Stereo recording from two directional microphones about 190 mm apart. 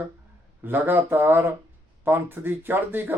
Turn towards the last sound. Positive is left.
turn(degrees=-10)  # may be behind; listen again after turning